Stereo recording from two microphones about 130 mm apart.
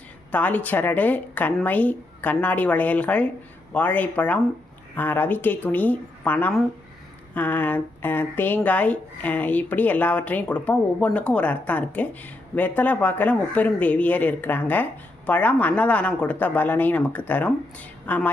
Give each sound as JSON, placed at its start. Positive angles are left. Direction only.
{"t": 0.3, "sound": "speech", "side_deg": 10}